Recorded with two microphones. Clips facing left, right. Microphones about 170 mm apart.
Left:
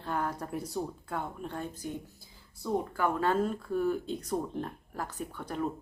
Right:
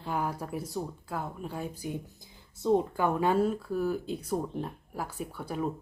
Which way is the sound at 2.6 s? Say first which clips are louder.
Right 5 dB; 20° right (ahead or behind).